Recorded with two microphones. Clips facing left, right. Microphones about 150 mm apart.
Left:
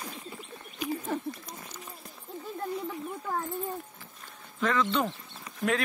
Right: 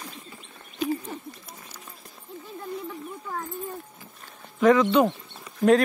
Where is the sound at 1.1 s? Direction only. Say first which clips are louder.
Left 6 dB; 90° left.